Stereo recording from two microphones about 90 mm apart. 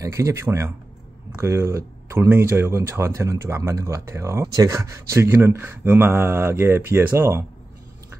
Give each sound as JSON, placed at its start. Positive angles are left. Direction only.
{"t": 0.0, "sound": "speech", "side_deg": -35}